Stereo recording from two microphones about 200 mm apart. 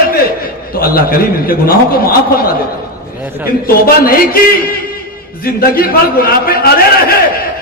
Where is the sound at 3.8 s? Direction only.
45° left (ahead or behind).